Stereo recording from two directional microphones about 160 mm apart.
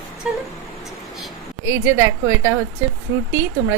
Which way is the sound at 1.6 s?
15° right (ahead or behind).